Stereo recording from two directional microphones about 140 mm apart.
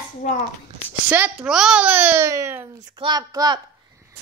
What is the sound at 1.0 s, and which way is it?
A child's voice, 10° right (ahead or behind).